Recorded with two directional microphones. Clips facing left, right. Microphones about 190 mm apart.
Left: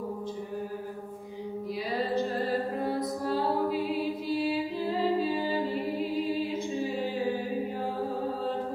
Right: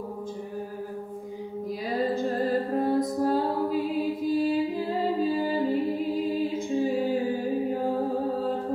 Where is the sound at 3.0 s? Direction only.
45° right (ahead or behind).